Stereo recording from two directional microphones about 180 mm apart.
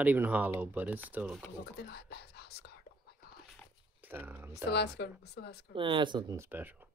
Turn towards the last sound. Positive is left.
turn(degrees=-25)  # may be behind; listen again after turning